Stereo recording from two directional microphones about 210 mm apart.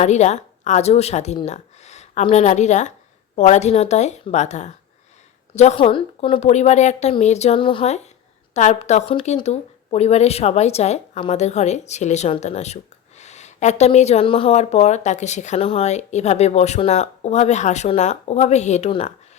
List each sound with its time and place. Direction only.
0.0 s speech: 35° left (ahead or behind)